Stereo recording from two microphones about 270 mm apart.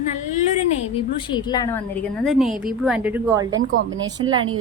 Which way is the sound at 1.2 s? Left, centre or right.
Centre.